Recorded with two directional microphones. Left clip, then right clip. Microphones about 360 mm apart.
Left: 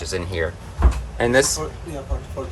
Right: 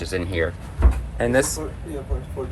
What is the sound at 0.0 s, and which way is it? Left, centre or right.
Speech, centre.